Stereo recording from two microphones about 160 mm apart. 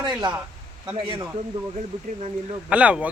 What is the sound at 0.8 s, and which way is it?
Speech, 30° right (ahead or behind).